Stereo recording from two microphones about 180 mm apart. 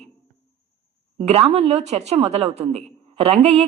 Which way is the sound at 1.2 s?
35° right (ahead or behind).